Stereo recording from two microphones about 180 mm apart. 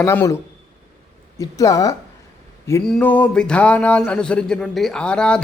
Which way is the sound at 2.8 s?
5° left (ahead or behind).